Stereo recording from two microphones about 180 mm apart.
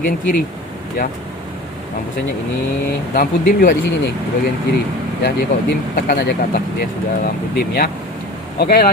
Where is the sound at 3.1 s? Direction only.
55° left (ahead or behind).